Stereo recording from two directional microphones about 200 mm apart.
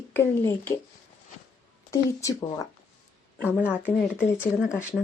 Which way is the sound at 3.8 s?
10° left (ahead or behind).